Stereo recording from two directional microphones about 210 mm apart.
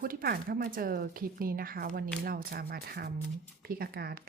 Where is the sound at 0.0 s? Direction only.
45° right (ahead or behind).